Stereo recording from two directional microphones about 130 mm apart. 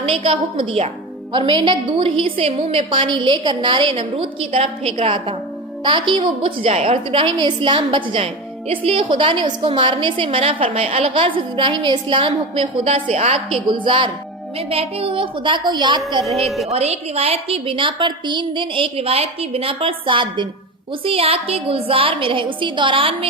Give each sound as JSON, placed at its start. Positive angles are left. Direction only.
{"t": 0.0, "sound": "a woman's voice", "side_deg": -45}
{"t": 16.6, "sound": "a woman's voice", "side_deg": -55}